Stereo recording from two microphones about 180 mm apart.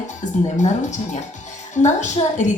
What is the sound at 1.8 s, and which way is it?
Speech, 40° left (ahead or behind).